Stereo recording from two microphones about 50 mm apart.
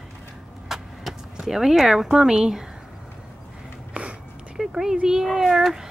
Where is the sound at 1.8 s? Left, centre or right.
Centre.